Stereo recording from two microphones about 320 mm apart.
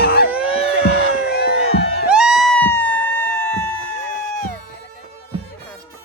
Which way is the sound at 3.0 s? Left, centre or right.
Centre.